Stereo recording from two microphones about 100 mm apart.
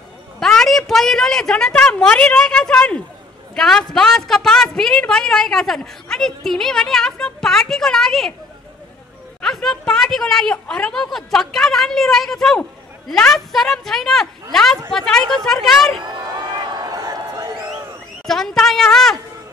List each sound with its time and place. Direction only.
0.4 s a woman's voice: 5° left (ahead or behind)
9.4 s a woman's voice: 5° left (ahead or behind)
16.6 s a sound: 40° right (ahead or behind)
18.2 s a woman's voice: 5° left (ahead or behind)